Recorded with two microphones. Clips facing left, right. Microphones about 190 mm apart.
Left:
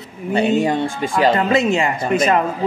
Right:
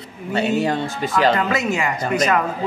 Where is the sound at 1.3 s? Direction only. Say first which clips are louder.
Left 4 dB; 25° left (ahead or behind).